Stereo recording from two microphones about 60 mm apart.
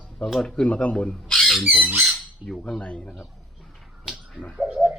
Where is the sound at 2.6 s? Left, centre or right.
Centre.